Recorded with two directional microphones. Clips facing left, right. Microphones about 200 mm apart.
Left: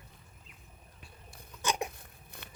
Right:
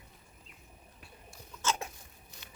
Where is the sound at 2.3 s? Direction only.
55° left (ahead or behind).